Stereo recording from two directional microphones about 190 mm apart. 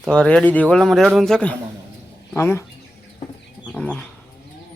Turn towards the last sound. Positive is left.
turn(degrees=5)  # may be behind; listen again after turning